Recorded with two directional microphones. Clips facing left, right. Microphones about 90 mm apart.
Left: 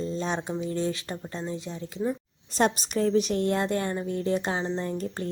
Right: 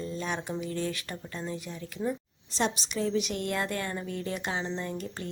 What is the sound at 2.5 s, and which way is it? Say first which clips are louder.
Speech: left 5 dB; 50° left (ahead or behind).